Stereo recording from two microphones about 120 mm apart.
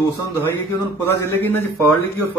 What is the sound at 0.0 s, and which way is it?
Speech, 25° left (ahead or behind).